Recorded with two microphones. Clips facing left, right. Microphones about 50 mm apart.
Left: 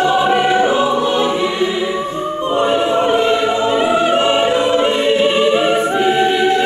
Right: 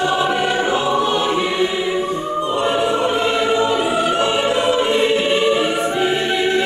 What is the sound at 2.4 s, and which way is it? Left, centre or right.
Choir, left.